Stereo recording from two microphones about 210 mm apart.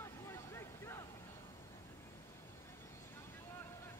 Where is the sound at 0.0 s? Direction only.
10° left (ahead or behind).